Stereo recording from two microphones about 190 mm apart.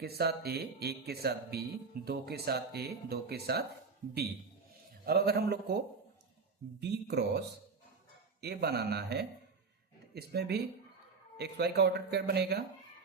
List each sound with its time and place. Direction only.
0.0 s speech: 55° right (ahead or behind)
5.0 s speech: 55° right (ahead or behind)